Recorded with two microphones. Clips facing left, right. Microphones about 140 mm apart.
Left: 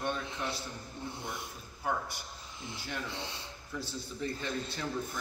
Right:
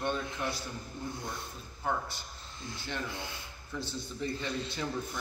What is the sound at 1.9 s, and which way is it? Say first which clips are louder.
Speech: right 1 dB; 5° left (ahead or behind).